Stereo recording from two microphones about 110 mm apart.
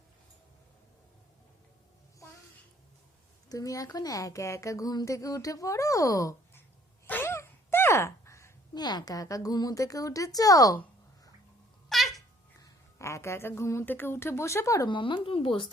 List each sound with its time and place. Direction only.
3.5 s a woman's voice: 30° left (ahead or behind)
7.1 s a sound: 20° left (ahead or behind)
8.7 s a woman's voice: 40° left (ahead or behind)
11.9 s babbling: centre (ahead or behind)
12.5 s speech: 30° left (ahead or behind)
14.8 s speech: 45° left (ahead or behind)